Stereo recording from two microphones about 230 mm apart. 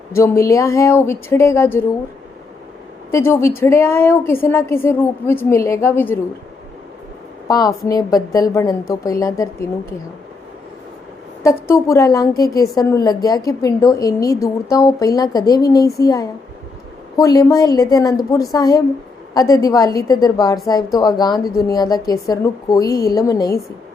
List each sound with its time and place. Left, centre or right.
0.1 s a woman's voice: centre
3.1 s a woman's voice: centre
7.4 s a woman's voice: centre
11.4 s a woman's voice: centre